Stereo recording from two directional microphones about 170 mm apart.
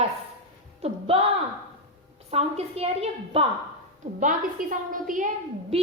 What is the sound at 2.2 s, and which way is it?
A woman's voice, 35° right (ahead or behind).